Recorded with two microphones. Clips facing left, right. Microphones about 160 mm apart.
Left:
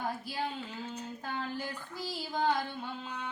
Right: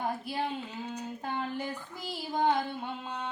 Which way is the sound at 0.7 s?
15° right (ahead or behind).